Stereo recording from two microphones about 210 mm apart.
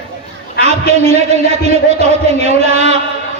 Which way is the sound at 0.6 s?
30° right (ahead or behind).